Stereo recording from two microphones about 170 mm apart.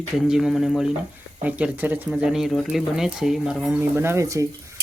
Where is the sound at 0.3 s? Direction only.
Centre (ahead or behind).